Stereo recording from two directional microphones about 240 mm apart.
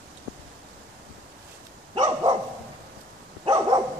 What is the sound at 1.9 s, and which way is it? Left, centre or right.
Dog, centre.